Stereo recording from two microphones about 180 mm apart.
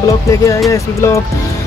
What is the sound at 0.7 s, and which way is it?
Speech, 15° left (ahead or behind).